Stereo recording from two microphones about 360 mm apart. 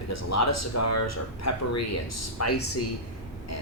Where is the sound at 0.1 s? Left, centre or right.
Left.